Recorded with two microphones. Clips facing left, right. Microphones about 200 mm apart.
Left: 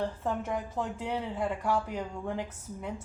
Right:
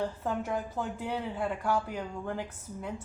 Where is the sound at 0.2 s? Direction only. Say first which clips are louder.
Even; 5° right (ahead or behind).